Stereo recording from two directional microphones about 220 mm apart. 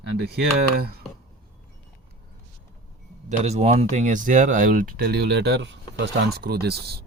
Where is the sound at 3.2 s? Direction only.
30° right (ahead or behind).